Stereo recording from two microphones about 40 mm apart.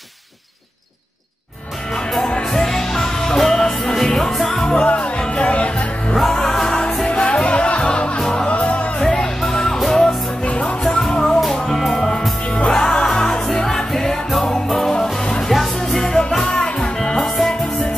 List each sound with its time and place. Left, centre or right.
2.2 s music: centre
4.7 s music: left
6.1 s music: centre
8.2 s music: centre
8.5 s music: left
9.0 s music: centre
10.4 s music: left
10.8 s music: centre
12.4 s music: left
12.7 s music: centre